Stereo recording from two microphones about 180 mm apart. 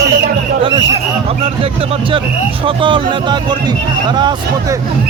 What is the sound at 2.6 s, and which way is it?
Speech, 30° right (ahead or behind).